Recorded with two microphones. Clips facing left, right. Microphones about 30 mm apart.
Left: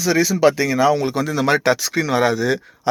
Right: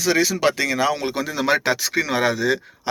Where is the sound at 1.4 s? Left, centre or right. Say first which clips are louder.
Left 2 dB; centre.